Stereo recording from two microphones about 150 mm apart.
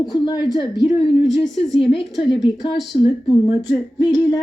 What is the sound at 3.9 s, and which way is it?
Speech, 25° left (ahead or behind).